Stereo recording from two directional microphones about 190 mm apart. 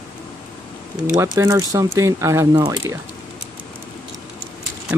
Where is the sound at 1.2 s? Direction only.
15° right (ahead or behind).